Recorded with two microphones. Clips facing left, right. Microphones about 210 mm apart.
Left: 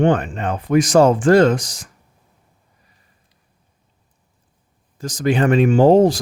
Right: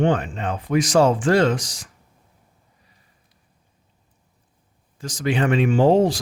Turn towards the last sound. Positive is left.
turn(degrees=45)  # may be behind; listen again after turning